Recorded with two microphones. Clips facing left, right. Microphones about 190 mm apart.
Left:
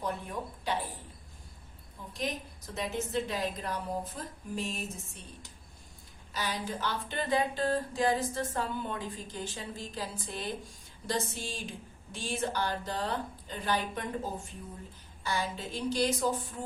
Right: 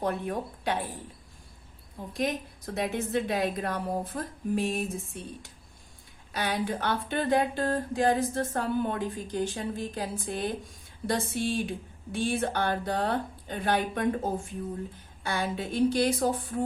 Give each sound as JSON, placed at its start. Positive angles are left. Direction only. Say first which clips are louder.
{"t": 0.0, "sound": "a woman's voice", "louder": "right 6 dB", "side_deg": -60}
{"t": 2.1, "sound": "a woman's voice", "louder": "right 6 dB", "side_deg": -60}
{"t": 6.3, "sound": "a sound", "louder": "right 6 dB", "side_deg": -60}
{"t": 11.0, "sound": "a woman's voice", "louder": "right 6 dB", "side_deg": -60}